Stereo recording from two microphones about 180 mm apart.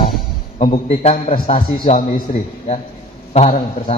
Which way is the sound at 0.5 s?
35° left (ahead or behind).